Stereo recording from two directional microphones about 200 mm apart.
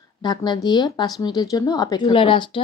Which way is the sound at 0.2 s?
20° left (ahead or behind).